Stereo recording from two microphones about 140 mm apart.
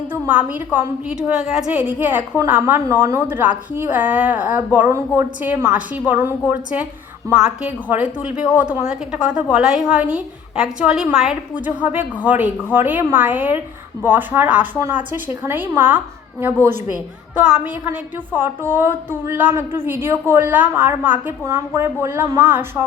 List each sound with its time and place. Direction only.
0.1 s a woman's voice: 10° right (ahead or behind)